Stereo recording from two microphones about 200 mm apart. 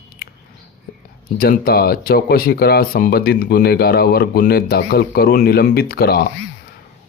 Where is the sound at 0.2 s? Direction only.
50° left (ahead or behind).